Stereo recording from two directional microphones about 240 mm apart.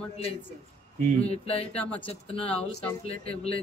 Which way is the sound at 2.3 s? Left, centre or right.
Left.